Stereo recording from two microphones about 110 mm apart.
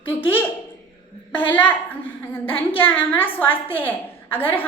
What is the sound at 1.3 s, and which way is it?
A woman's voice, 15° left (ahead or behind).